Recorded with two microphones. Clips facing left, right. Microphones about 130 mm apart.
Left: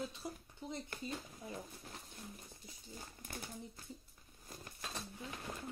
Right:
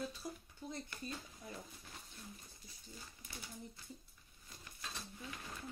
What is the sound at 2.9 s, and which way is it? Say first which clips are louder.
Speech: left 5 dB; 50° left (ahead or behind).